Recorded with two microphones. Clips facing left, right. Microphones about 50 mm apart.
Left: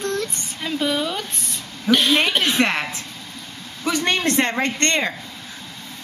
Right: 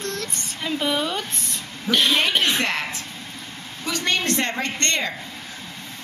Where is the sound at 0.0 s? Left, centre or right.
Centre.